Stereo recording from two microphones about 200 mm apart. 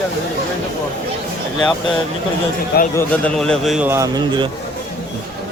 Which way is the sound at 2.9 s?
5° left (ahead or behind).